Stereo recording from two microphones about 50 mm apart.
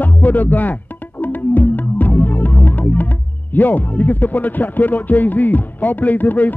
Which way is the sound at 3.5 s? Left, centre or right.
Left.